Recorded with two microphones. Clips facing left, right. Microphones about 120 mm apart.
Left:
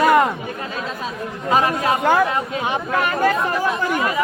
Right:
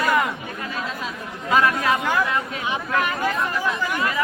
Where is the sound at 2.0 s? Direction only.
45° left (ahead or behind).